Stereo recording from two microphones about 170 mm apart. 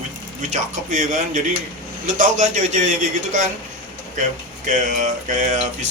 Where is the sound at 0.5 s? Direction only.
50° right (ahead or behind).